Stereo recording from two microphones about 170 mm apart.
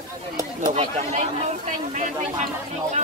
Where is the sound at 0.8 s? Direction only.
40° right (ahead or behind).